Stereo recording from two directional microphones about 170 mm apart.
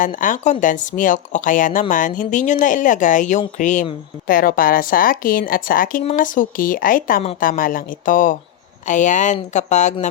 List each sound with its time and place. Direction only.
0.0 s speech: 50° left (ahead or behind)
4.3 s a woman's voice: 55° left (ahead or behind)